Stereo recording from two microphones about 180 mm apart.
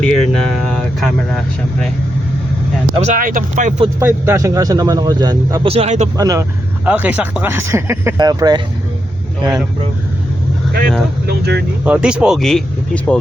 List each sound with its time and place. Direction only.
0.0 s air conditioning: 5° left (ahead or behind)
2.9 s speech: 35° right (ahead or behind)
3.2 s speech: 50° right (ahead or behind)
4.0 s speech: 15° right (ahead or behind)
5.6 s speech: 35° right (ahead or behind)
6.1 s speech: 20° right (ahead or behind)
6.8 s speech: 10° right (ahead or behind)
11.3 s speech: 65° right (ahead or behind)
11.9 s speech: 5° right (ahead or behind)